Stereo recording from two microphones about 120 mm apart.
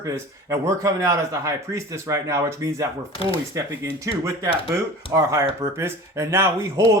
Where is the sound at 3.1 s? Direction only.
50° left (ahead or behind).